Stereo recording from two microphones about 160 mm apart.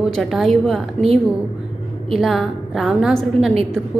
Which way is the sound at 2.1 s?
Centre (ahead or behind).